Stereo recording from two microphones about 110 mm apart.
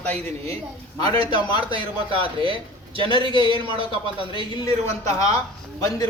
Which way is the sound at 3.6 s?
50° right (ahead or behind).